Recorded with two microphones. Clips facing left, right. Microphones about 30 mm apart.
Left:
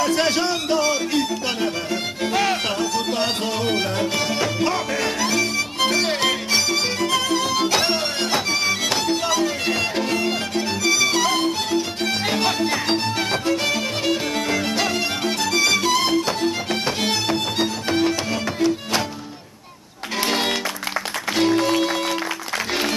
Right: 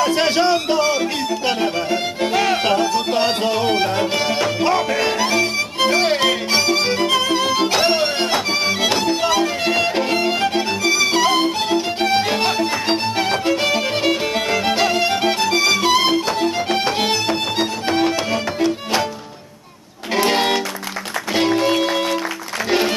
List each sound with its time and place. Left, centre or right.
0.0 s music: centre
11.2 s violin: centre
12.0 s music: centre
15.8 s music: right
20.2 s music: centre